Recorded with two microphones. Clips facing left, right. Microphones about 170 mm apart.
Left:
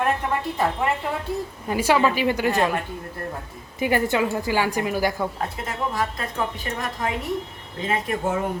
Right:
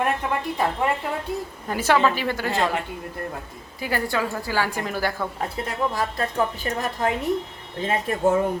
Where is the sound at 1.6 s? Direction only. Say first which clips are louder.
Even; 10° left (ahead or behind).